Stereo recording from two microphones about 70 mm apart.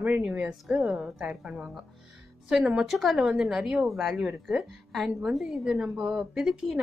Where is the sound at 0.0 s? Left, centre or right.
Right.